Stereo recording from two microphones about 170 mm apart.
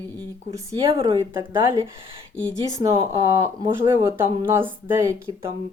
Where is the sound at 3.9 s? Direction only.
15° right (ahead or behind).